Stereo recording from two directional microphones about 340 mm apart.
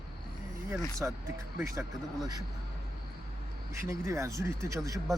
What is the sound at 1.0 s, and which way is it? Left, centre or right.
Speech, centre.